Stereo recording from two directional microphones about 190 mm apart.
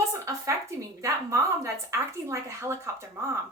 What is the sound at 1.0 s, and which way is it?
A woman's voice, 15° right (ahead or behind).